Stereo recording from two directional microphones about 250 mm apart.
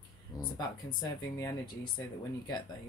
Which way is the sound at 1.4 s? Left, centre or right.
Centre.